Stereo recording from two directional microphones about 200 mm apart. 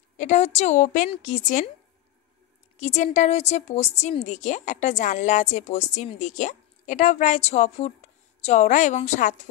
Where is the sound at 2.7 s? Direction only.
35° left (ahead or behind).